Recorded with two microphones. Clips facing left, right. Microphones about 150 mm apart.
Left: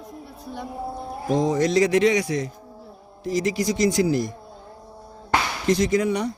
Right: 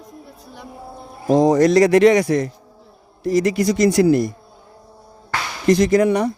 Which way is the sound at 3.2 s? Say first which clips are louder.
Right 6 dB; 70° right (ahead or behind).